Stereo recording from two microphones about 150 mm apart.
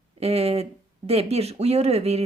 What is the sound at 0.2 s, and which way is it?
Speech, 45° right (ahead or behind).